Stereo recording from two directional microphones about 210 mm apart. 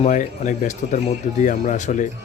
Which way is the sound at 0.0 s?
35° left (ahead or behind).